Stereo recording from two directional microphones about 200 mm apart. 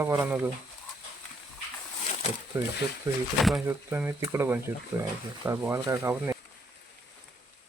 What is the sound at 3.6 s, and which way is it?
Speech, 10° right (ahead or behind).